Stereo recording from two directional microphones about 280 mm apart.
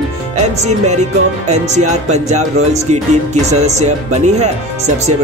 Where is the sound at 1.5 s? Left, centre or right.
Right.